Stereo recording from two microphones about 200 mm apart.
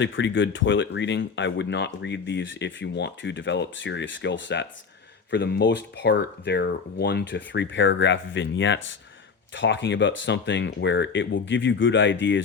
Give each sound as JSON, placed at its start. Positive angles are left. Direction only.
{"t": 0.0, "sound": "speech", "side_deg": 65}